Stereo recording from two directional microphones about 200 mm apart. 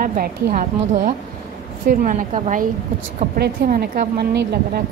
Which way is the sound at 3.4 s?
50° right (ahead or behind).